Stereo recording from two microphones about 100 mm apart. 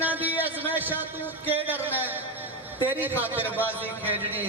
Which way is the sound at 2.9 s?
20° right (ahead or behind).